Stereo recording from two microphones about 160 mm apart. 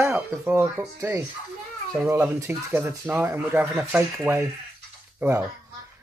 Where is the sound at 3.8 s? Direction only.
Centre (ahead or behind).